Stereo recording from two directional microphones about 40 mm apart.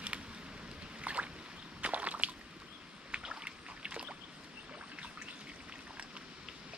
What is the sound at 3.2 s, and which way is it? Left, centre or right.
Boat, right.